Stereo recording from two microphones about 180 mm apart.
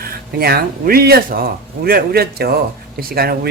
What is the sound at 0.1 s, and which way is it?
Speech, 60° right (ahead or behind).